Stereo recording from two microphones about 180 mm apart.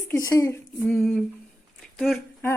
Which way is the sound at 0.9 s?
Centre (ahead or behind).